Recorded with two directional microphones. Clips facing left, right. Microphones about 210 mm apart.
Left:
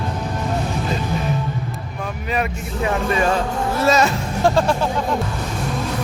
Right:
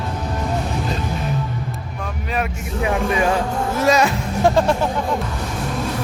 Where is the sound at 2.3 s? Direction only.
5° right (ahead or behind).